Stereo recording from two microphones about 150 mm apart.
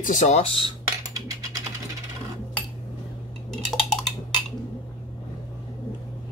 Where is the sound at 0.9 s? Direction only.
25° right (ahead or behind).